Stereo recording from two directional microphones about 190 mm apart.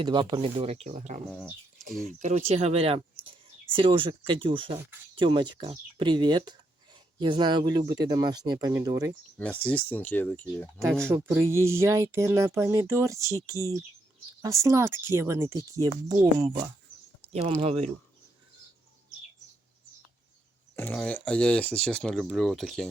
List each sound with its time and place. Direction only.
0.0 s speech: 25° right (ahead or behind)
9.4 s speech: 10° left (ahead or behind)
11.1 s speech: 10° right (ahead or behind); by 17.8 s 30° right (ahead or behind)
20.7 s speech: 10° left (ahead or behind)